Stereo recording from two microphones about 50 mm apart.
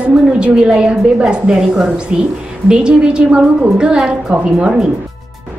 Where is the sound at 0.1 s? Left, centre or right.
Centre.